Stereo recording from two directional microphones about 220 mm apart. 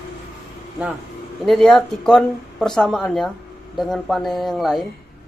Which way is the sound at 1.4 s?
Centre (ahead or behind).